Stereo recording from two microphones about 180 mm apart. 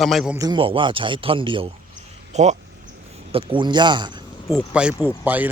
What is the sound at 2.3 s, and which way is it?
Speech, 40° right (ahead or behind).